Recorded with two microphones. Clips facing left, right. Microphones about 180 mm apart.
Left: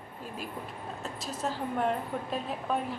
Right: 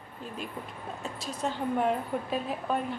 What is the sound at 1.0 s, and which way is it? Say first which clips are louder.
A woman's voice: right 1 dB; centre (ahead or behind).